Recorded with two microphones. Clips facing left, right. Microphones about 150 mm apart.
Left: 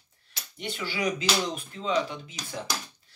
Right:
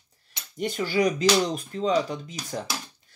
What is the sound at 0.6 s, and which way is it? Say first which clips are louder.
Speech: right 8 dB; 40° right (ahead or behind).